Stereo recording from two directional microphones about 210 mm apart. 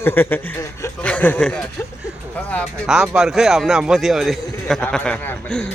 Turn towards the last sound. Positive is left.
turn(degrees=5)  # may be behind; listen again after turning